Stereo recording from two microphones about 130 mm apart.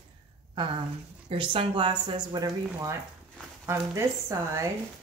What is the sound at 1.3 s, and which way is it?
Speech, 45° right (ahead or behind).